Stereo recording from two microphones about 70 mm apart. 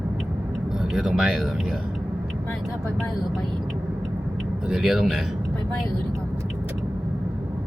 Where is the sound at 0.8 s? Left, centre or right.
Centre.